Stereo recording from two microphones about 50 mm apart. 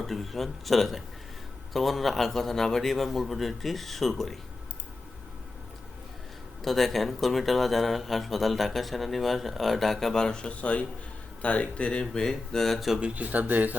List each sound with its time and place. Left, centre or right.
0.0 s speech: centre
6.6 s speech: centre; by 11.9 s left
11.9 s speech: centre
13.5 s speech: right